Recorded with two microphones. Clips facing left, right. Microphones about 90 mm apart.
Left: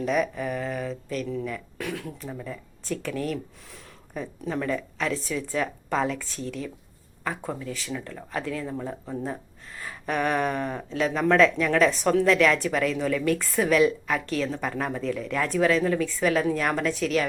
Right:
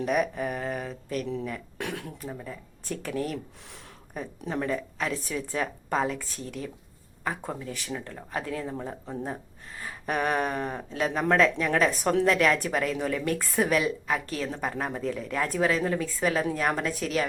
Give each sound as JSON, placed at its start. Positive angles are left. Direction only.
{"t": 0.0, "sound": "a woman's voice", "side_deg": -40}
{"t": 10.8, "sound": "a woman's voice", "side_deg": -35}